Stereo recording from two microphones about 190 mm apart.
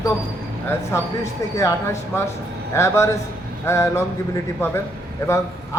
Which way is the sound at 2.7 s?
15° left (ahead or behind).